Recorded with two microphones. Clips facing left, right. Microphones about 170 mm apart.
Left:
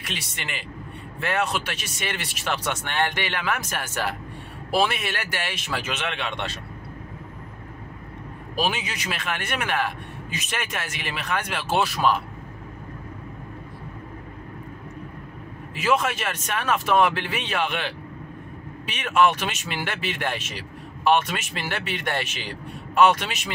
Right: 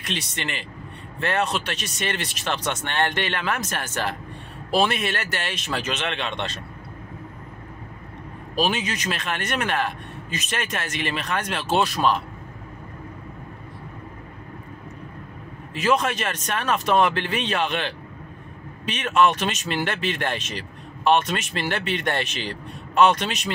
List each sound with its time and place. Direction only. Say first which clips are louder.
0.0 s speech: right 5 dB; 5° left (ahead or behind)
8.5 s speech: right 3 dB; 10° left (ahead or behind)
15.7 s speech: right 1 dB; 10° left (ahead or behind)